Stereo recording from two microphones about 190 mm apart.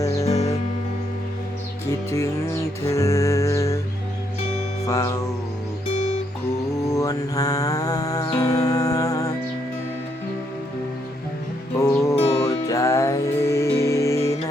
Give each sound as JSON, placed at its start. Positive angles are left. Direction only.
{"t": 0.0, "sound": "music", "side_deg": 15}
{"t": 0.3, "sound": "music", "side_deg": 35}
{"t": 2.0, "sound": "music", "side_deg": 15}
{"t": 4.9, "sound": "music", "side_deg": 15}
{"t": 6.9, "sound": "mantra", "side_deg": 20}
{"t": 8.4, "sound": "music", "side_deg": 20}
{"t": 11.8, "sound": "music", "side_deg": 15}
{"t": 12.1, "sound": "music", "side_deg": 30}
{"t": 12.6, "sound": "music", "side_deg": 15}